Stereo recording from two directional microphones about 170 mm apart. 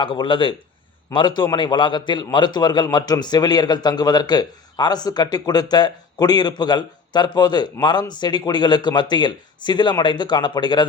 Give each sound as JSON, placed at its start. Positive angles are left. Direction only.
{"t": 0.0, "sound": "a man's voice", "side_deg": 30}